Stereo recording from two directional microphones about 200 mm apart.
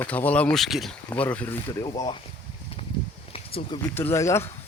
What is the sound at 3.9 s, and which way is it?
Speech, 15° left (ahead or behind).